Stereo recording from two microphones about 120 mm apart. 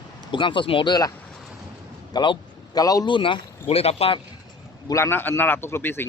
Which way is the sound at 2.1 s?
35° left (ahead or behind).